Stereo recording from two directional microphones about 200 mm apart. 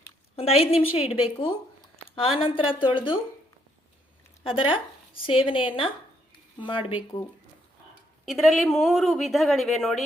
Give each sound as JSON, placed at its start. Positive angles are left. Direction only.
{"t": 0.3, "sound": "a woman's voice", "side_deg": 30}
{"t": 4.4, "sound": "a woman's voice", "side_deg": 25}
{"t": 8.2, "sound": "speech", "side_deg": 0}